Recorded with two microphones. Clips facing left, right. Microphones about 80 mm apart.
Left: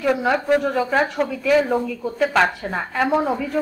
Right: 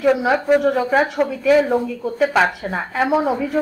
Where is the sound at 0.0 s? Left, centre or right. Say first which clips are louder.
Right 3 dB; centre.